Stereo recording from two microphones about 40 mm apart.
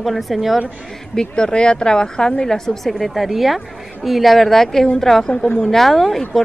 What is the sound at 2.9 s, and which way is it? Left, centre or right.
A woman's voice, centre.